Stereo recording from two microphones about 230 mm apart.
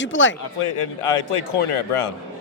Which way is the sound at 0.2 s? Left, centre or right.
Left.